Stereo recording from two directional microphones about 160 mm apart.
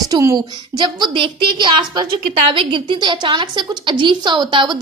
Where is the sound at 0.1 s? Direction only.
20° right (ahead or behind).